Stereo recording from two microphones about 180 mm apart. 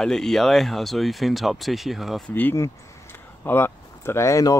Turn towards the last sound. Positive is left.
turn(degrees=20)  # may be behind; listen again after turning